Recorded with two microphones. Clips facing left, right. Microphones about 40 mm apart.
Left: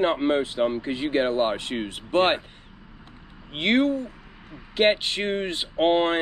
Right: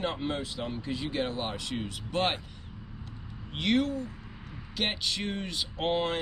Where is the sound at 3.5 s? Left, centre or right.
Left.